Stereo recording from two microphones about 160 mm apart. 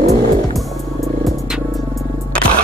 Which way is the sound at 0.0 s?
40° right (ahead or behind).